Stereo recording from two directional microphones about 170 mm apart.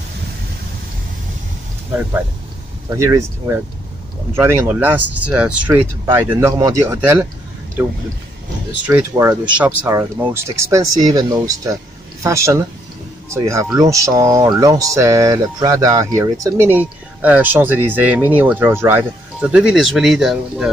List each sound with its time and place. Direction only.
2.9 s speech: 20° right (ahead or behind)
8.8 s speech: 10° right (ahead or behind)